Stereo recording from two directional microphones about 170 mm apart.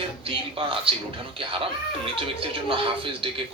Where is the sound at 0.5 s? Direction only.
30° right (ahead or behind).